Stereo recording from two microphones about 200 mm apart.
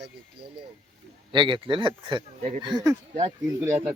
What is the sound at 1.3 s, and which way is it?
Speech, 25° right (ahead or behind).